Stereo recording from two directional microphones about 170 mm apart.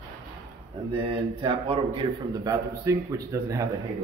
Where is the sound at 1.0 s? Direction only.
30° right (ahead or behind).